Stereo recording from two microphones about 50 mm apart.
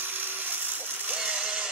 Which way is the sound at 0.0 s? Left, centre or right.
Right.